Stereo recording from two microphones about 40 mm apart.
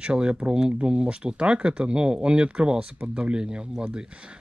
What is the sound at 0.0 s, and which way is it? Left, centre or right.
Speech, right.